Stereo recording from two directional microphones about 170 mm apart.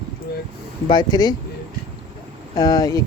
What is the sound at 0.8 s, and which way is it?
Speech, 25° left (ahead or behind).